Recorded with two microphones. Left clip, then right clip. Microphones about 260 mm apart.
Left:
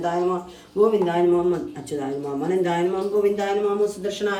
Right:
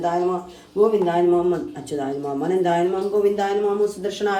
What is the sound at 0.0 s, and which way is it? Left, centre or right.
Speech, centre.